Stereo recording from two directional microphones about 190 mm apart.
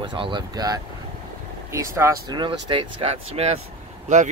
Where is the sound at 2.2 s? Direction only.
25° right (ahead or behind).